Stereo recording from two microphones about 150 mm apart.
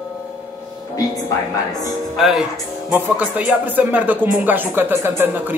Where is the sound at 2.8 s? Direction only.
10° right (ahead or behind).